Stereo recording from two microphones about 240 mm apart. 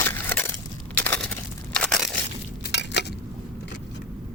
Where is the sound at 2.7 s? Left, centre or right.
Left.